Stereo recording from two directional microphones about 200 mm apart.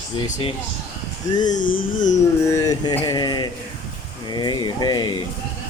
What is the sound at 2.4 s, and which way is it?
Mantra, 15° left (ahead or behind).